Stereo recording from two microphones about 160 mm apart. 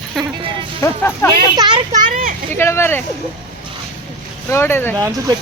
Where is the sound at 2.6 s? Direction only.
15° left (ahead or behind).